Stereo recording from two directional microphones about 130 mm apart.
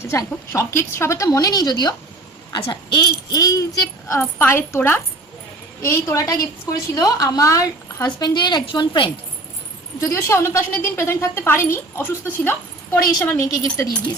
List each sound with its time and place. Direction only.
0.0 s a woman's voice: 20° left (ahead or behind); by 9.0 s 35° left (ahead or behind)
10.1 s a woman's voice: 20° left (ahead or behind)
13.0 s a woman's voice: 30° left (ahead or behind)
13.2 s a woman's voice: 20° left (ahead or behind)